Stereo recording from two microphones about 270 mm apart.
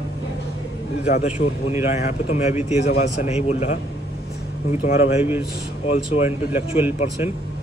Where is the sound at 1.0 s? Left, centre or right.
Left.